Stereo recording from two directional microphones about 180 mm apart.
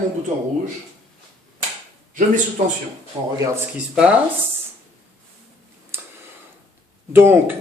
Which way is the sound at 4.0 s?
5° right (ahead or behind).